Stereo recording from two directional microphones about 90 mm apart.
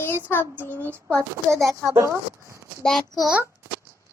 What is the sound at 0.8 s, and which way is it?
Speech, 25° right (ahead or behind).